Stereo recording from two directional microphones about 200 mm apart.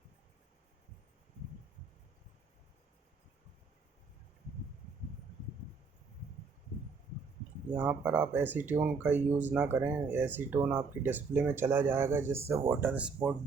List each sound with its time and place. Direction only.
7.8 s speech: 10° right (ahead or behind)